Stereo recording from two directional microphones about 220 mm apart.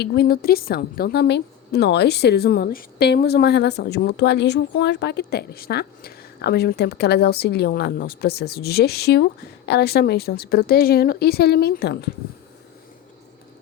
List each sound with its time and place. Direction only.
0.0 s a woman's voice: 45° left (ahead or behind)